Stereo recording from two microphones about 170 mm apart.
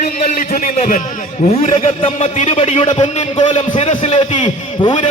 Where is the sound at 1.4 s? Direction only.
35° left (ahead or behind).